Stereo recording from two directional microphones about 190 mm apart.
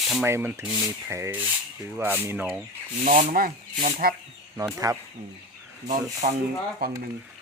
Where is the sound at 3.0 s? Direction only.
45° right (ahead or behind).